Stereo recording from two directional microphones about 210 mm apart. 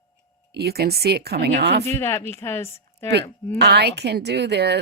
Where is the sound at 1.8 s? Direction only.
10° left (ahead or behind).